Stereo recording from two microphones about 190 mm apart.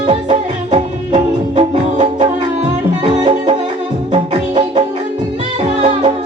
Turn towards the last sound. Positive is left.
turn(degrees=-30)  # may be behind; listen again after turning